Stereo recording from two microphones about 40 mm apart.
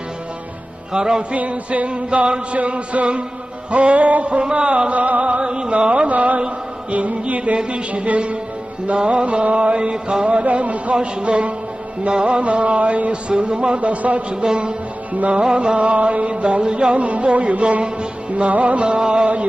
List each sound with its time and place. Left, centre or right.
0.9 s music: centre
1.3 s music: right
5.4 s music: right
10.4 s music: right
14.4 s music: right
15.1 s music: right